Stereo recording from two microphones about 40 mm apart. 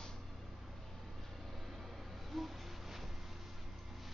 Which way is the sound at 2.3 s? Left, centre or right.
Centre.